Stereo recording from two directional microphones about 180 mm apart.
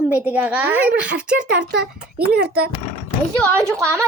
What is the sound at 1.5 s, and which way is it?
Speech, 65° right (ahead or behind).